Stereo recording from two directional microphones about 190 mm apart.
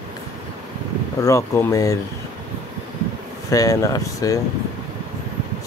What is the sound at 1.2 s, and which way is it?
Speech, 15° left (ahead or behind).